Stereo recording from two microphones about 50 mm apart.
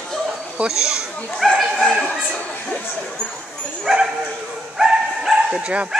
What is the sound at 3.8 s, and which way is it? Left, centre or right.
Bow-wow, centre.